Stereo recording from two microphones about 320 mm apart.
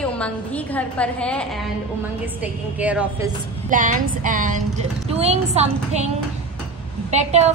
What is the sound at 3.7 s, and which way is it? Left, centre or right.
A woman's voice, right.